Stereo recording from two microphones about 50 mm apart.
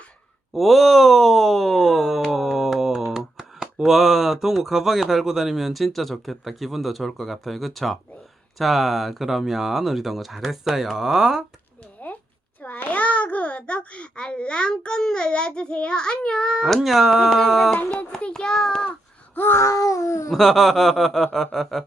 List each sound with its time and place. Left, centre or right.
0.5 s speech: centre
12.0 s a sound: left
12.6 s babbling: left
16.6 s speech: centre
18.2 s child singing: centre
19.5 s cat: left
20.3 s speech: centre